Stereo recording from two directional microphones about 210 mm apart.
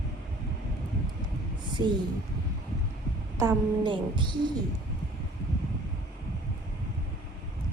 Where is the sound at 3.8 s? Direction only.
20° right (ahead or behind).